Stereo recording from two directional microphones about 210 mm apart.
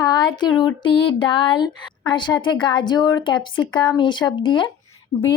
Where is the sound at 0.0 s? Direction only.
20° left (ahead or behind).